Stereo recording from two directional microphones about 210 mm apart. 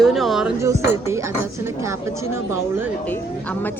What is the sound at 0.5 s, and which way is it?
Speech, 15° right (ahead or behind).